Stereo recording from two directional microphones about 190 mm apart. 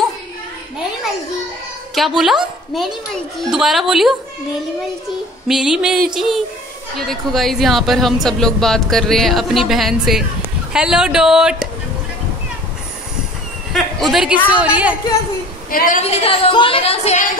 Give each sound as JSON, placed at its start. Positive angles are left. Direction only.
{"t": 2.0, "sound": "speech", "side_deg": 0}
{"t": 5.5, "sound": "speech", "side_deg": -5}
{"t": 13.9, "sound": "a woman's voice", "side_deg": 0}
{"t": 15.7, "sound": "a woman's voice", "side_deg": 45}
{"t": 16.0, "sound": "a woman's voice", "side_deg": 35}